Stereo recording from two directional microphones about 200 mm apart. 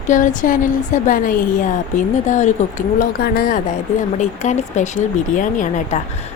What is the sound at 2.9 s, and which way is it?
Speech, 50° left (ahead or behind).